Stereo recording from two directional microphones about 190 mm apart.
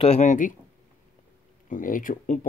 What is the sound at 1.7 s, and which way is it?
Speech, 45° left (ahead or behind).